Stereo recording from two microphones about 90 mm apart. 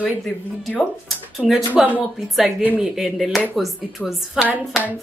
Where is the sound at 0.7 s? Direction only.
Centre (ahead or behind).